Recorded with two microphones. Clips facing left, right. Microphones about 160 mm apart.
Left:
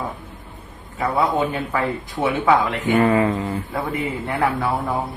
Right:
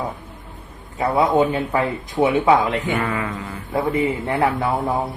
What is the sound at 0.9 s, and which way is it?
Speech, 20° right (ahead or behind).